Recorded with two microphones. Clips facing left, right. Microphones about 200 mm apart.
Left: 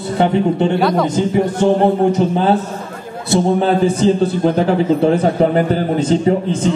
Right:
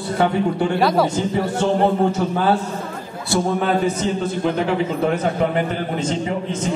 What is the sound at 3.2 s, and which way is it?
A man's voice, 25° left (ahead or behind).